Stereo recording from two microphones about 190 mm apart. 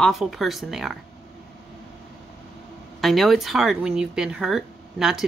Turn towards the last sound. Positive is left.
turn(degrees=0)  # may be behind; listen again after turning